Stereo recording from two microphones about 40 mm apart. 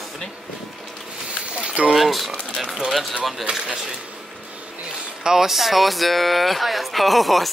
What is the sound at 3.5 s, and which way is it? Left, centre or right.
Speech, right.